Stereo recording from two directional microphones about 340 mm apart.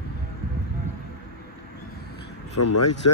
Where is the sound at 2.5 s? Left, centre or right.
Left.